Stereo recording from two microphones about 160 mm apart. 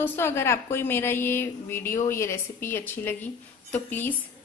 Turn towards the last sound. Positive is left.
turn(degrees=10)  # may be behind; listen again after turning